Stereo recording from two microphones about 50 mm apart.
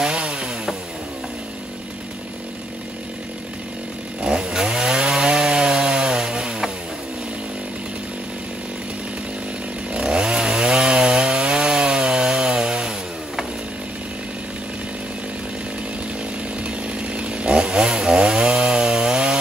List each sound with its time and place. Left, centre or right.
0.0 s chainsaw: right
4.2 s chainsaw: centre
9.9 s chainsaw: centre
16.6 s chainsaw: right